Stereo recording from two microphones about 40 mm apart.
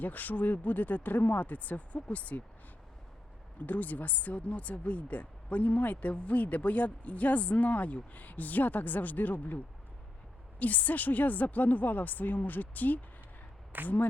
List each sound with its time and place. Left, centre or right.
0.0 s speech: left
3.7 s speech: left
10.6 s speech: left